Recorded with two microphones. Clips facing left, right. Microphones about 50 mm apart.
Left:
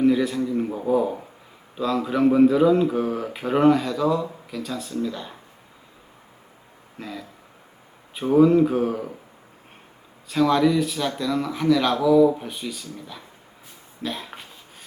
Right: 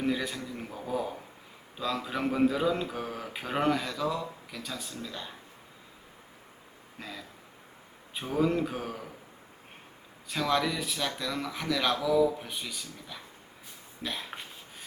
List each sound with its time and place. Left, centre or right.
0.0 s a sound: centre
0.3 s speech: centre
7.0 s speech: centre
8.4 s speech: centre
10.2 s speech: centre